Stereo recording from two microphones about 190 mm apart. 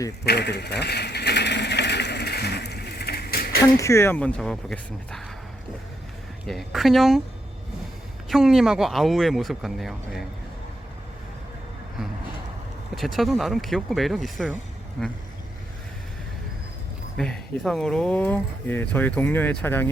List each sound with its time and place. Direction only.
0.3 s a sound: 60° left (ahead or behind)
3.8 s speech: 15° left (ahead or behind)
6.5 s speech: centre (ahead or behind)
8.3 s speech: centre (ahead or behind)
13.0 s speech: centre (ahead or behind)
17.2 s speech: 5° left (ahead or behind)